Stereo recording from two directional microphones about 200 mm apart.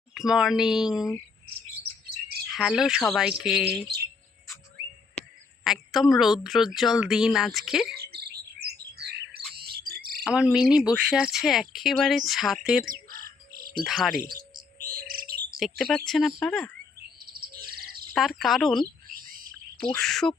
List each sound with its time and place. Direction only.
0.1 s speech: 5° right (ahead or behind)
2.5 s speech: centre (ahead or behind)
5.6 s speech: centre (ahead or behind)
7.9 s chirp: 55° right (ahead or behind)
8.6 s bird: 55° right (ahead or behind)
10.2 s speech: 5° right (ahead or behind)
12.9 s bird: 45° right (ahead or behind)
13.8 s speech: centre (ahead or behind)
14.2 s chirp: 45° right (ahead or behind)
15.5 s speech: centre (ahead or behind)
17.3 s bird: 50° right (ahead or behind)
18.1 s speech: centre (ahead or behind)